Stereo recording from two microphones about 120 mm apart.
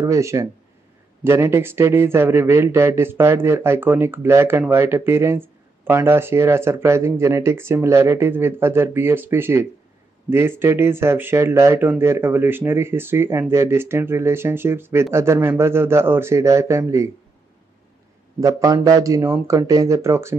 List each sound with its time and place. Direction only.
0.0 s a man's voice: 25° right (ahead or behind)
18.4 s a man's voice: 30° right (ahead or behind)